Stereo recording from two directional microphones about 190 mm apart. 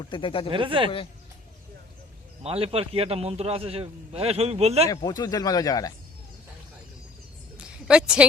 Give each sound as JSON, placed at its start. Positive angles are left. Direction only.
{"t": 0.0, "sound": "speech", "side_deg": 25}
{"t": 0.5, "sound": "speech", "side_deg": -25}
{"t": 2.4, "sound": "a man's voice", "side_deg": -30}
{"t": 4.9, "sound": "speech", "side_deg": 20}
{"t": 7.5, "sound": "a sound", "side_deg": -5}